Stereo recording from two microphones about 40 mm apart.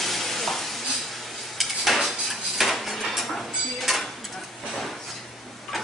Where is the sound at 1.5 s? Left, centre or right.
Centre.